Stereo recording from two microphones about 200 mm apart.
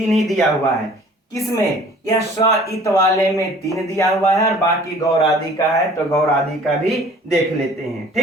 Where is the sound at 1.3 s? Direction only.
15° left (ahead or behind).